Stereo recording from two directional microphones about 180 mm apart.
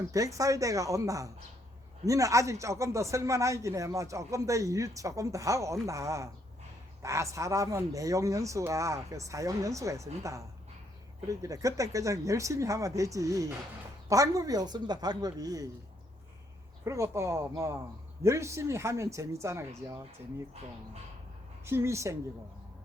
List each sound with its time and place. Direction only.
0.1 s speech: 20° right (ahead or behind)
16.8 s speech: 15° right (ahead or behind)
21.6 s speech: 15° right (ahead or behind)